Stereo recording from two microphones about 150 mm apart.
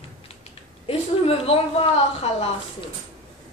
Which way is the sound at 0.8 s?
40° left (ahead or behind).